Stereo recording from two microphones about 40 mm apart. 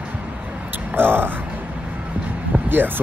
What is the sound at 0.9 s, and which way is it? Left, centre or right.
Speech, right.